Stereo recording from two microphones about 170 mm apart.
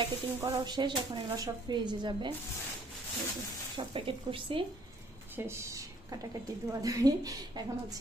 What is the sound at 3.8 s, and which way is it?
Speech, 30° right (ahead or behind).